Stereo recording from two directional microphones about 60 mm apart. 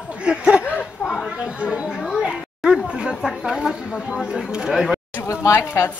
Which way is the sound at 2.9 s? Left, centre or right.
Centre.